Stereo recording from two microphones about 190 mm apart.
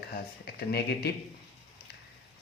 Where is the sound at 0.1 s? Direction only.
60° left (ahead or behind).